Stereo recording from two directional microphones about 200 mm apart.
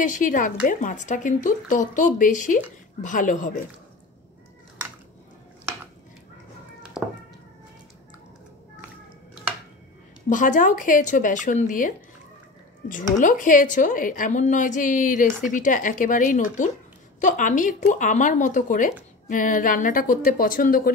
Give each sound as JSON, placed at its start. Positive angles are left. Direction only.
{"t": 0.0, "sound": "speech", "side_deg": 40}
{"t": 7.0, "sound": "a sound", "side_deg": 0}
{"t": 10.3, "sound": "a woman's voice", "side_deg": 40}